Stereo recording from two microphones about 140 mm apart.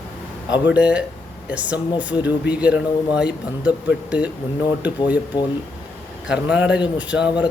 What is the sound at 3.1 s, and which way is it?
Speech, 5° right (ahead or behind).